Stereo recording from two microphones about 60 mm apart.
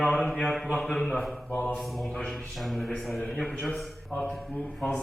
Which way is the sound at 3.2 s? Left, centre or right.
Centre.